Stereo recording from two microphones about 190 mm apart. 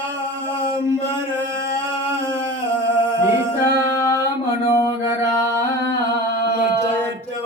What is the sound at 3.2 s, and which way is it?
A capella, 15° right (ahead or behind).